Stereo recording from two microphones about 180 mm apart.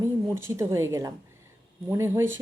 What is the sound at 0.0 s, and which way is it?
A woman's voice, 15° right (ahead or behind).